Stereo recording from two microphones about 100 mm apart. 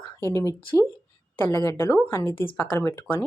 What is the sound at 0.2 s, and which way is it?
Speech, 30° left (ahead or behind).